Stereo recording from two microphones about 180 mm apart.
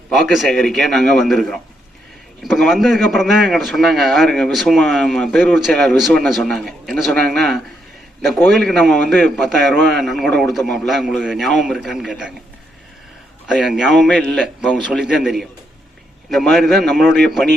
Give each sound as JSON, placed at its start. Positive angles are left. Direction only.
{"t": 0.1, "sound": "a man's voice", "side_deg": 0}
{"t": 13.5, "sound": "a man's voice", "side_deg": -5}